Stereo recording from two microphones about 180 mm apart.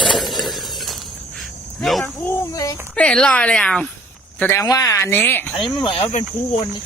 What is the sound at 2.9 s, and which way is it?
Speech, 5° left (ahead or behind).